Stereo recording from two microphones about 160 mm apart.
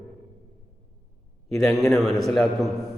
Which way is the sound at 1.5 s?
Centre (ahead or behind).